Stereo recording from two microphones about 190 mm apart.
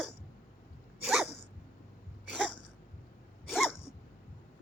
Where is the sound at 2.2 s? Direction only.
5° right (ahead or behind).